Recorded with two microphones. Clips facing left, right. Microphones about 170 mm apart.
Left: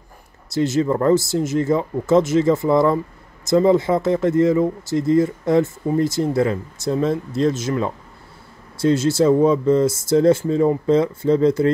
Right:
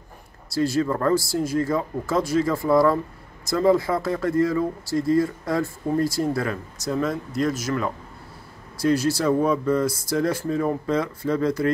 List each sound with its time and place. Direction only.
0.5 s speech: 20° left (ahead or behind)